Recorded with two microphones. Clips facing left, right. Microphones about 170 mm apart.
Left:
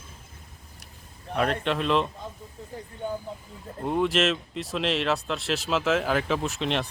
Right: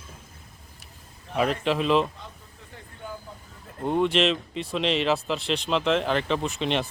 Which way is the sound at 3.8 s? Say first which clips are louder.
Right 2 dB; centre (ahead or behind).